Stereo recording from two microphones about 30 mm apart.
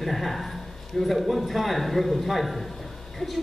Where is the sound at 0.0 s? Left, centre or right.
Centre.